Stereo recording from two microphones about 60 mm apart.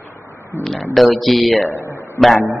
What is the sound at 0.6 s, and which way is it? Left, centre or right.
Speech, centre.